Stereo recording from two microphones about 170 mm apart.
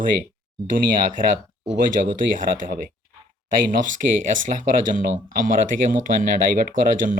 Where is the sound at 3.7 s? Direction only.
50° right (ahead or behind).